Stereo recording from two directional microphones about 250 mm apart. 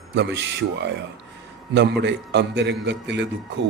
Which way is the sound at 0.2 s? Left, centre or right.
Right.